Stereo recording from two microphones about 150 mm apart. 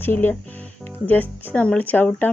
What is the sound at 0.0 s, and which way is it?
Speech, 15° left (ahead or behind).